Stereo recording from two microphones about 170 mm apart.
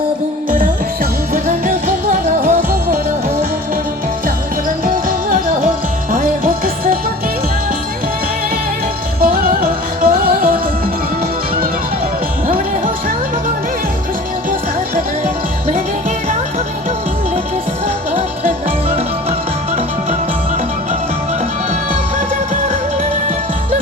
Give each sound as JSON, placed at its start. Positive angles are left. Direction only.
{"t": 1.3, "sound": "music", "side_deg": -55}
{"t": 4.9, "sound": "music", "side_deg": -55}
{"t": 9.2, "sound": "music", "side_deg": -60}